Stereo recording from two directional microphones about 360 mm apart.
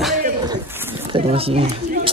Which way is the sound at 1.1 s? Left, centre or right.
Centre.